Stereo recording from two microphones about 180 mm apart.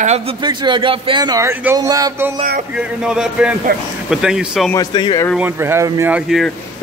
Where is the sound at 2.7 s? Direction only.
5° right (ahead or behind).